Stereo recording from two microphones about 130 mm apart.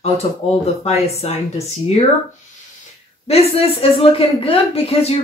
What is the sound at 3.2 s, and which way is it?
Speech, 50° left (ahead or behind).